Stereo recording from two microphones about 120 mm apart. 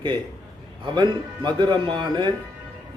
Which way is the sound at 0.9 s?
40° right (ahead or behind).